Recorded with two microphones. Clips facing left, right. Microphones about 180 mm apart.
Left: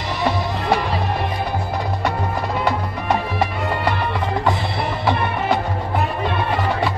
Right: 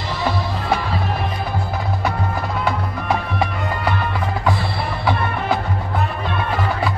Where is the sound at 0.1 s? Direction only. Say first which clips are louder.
Left 1 dB; 15° left (ahead or behind).